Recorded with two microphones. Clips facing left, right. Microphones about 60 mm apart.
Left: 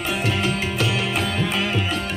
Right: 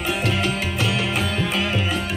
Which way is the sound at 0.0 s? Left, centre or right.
Centre.